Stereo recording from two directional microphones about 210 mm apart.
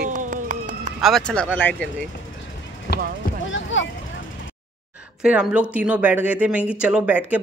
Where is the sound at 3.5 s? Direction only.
65° left (ahead or behind).